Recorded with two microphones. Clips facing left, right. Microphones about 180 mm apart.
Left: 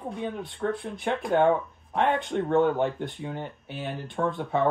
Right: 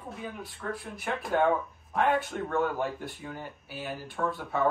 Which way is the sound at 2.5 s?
25° left (ahead or behind).